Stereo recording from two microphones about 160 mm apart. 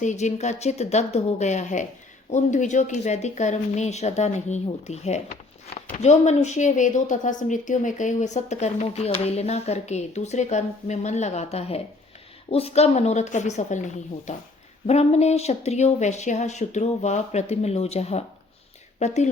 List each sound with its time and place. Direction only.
0.0 s speech: 45° left (ahead or behind)